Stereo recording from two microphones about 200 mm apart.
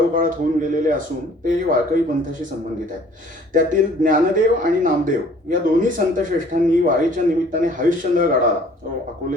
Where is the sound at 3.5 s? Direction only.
40° right (ahead or behind).